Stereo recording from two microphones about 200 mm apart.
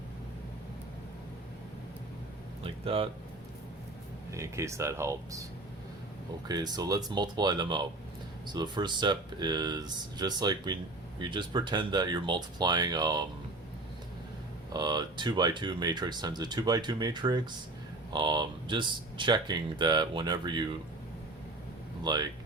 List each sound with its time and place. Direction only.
2.8 s speech: 25° right (ahead or behind)
4.3 s speech: 15° right (ahead or behind)
6.5 s speech: 20° right (ahead or behind)
14.7 s speech: 20° right (ahead or behind)
22.0 s speech: 20° right (ahead or behind)